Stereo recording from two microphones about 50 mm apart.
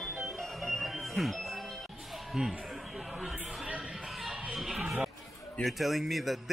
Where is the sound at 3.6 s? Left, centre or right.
Right.